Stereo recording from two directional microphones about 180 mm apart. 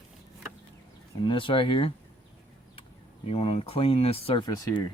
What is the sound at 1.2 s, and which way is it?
Speech, 30° left (ahead or behind).